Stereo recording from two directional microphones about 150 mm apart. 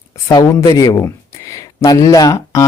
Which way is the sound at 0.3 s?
25° left (ahead or behind).